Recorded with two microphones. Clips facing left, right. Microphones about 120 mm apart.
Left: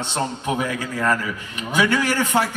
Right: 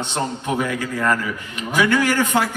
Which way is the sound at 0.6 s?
15° left (ahead or behind).